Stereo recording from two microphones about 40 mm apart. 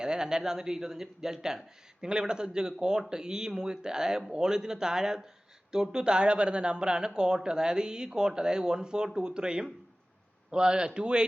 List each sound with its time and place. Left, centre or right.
0.0 s speech: centre